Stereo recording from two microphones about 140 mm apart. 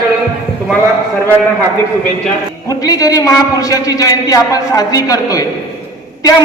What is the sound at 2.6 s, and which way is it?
A man's voice, 25° left (ahead or behind).